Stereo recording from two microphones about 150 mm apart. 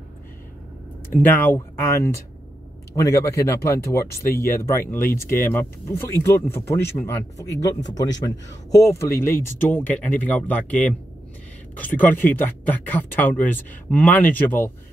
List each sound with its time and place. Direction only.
1.2 s speech: 15° left (ahead or behind)
4.2 s speech: 75° left (ahead or behind)
4.6 s speech: 15° left (ahead or behind)